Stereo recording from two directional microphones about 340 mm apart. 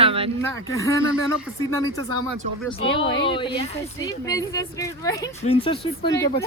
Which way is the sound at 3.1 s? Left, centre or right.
Centre.